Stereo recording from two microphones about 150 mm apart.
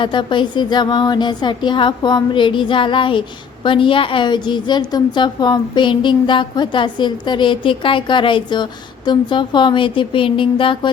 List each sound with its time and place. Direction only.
0.0 s speech: 30° left (ahead or behind)